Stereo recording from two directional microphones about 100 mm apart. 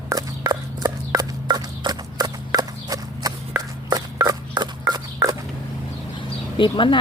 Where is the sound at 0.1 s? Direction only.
40° right (ahead or behind).